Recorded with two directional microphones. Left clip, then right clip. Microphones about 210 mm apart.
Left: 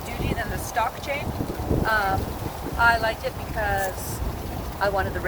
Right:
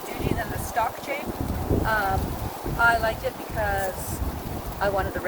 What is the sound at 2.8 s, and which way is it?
Speech, 15° right (ahead or behind).